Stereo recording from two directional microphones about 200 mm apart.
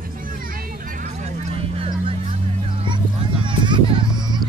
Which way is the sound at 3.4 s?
25° right (ahead or behind).